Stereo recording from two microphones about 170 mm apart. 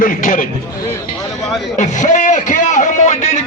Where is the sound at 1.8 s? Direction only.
45° left (ahead or behind).